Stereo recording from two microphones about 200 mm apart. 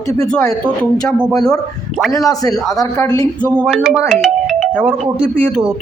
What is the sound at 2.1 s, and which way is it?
Speech, 15° left (ahead or behind).